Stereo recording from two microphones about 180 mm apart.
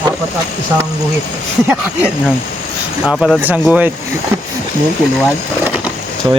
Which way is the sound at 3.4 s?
10° right (ahead or behind).